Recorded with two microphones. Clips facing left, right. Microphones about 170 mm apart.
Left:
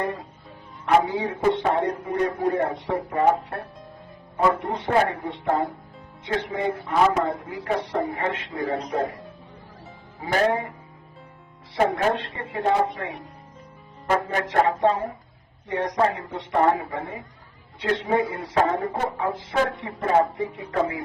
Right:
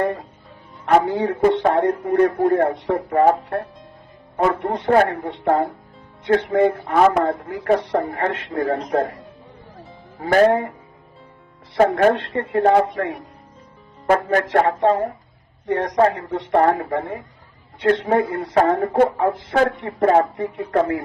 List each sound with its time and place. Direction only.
0.0 s a man's voice: 60° right (ahead or behind)
5.1 s a man's voice: 60° right (ahead or behind)
9.7 s music: 60° right (ahead or behind)
11.9 s a man's voice: 60° right (ahead or behind)